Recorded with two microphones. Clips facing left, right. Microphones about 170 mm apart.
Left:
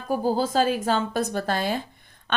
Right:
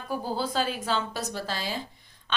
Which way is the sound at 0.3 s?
45° left (ahead or behind).